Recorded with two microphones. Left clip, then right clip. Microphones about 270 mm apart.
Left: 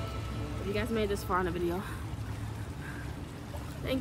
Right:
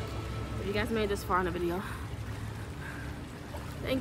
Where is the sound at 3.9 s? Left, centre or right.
Centre.